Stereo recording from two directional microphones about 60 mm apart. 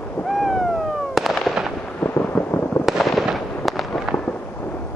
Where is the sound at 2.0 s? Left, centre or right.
Left.